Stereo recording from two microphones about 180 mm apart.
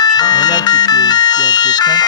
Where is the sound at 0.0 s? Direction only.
25° left (ahead or behind).